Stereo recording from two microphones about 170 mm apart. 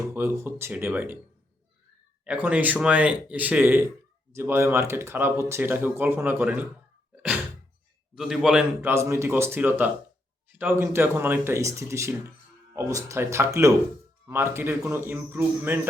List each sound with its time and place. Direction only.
0.1 s speech: 15° right (ahead or behind)
2.2 s speech: 10° right (ahead or behind)
8.1 s a man's voice: centre (ahead or behind)
8.9 s speech: 15° right (ahead or behind)